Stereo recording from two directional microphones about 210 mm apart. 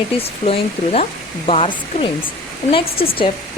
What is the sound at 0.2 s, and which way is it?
Speech, 30° left (ahead or behind).